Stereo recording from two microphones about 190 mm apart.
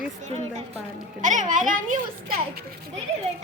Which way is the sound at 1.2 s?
40° right (ahead or behind).